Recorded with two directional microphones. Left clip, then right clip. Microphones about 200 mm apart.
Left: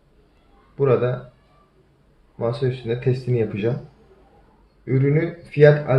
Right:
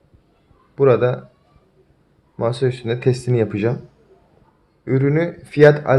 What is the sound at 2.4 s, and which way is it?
Speech, 50° right (ahead or behind).